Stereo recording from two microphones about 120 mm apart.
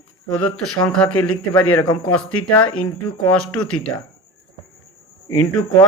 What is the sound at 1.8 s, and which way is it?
Speech, 40° left (ahead or behind).